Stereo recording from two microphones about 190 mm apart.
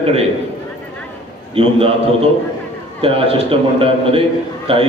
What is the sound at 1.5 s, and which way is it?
A man's voice, 30° right (ahead or behind).